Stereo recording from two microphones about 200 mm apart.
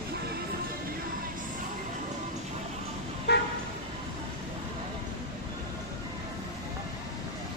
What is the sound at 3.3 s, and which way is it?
Vehicle, 55° left (ahead or behind).